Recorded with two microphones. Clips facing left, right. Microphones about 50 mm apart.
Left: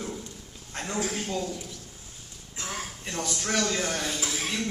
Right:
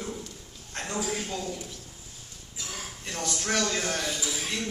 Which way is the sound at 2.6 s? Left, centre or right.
Left.